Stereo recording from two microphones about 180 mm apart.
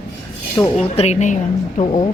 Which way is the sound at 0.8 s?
35° left (ahead or behind).